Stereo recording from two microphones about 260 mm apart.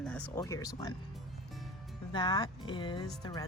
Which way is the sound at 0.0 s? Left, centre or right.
Centre.